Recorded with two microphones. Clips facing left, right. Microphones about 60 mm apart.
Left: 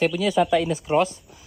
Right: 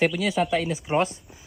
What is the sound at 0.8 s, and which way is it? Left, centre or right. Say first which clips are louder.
Speech: left 3 dB; right.